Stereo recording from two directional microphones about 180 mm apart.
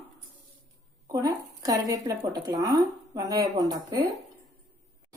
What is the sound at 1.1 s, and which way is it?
Speech, 20° right (ahead or behind).